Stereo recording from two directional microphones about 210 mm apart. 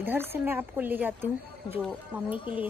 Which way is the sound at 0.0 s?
10° right (ahead or behind).